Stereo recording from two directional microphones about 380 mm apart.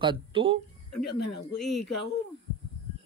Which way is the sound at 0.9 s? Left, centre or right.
Left.